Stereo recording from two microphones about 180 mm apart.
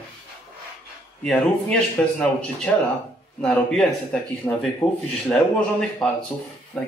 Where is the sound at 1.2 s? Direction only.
5° left (ahead or behind).